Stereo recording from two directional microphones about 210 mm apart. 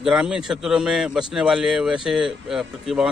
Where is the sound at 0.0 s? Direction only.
5° right (ahead or behind).